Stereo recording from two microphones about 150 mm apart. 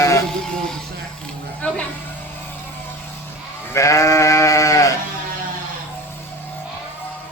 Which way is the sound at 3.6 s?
20° left (ahead or behind).